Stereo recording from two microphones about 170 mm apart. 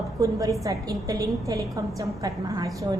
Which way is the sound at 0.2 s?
20° right (ahead or behind).